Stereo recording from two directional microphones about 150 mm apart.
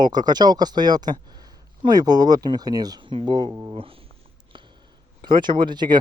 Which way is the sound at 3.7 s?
40° right (ahead or behind).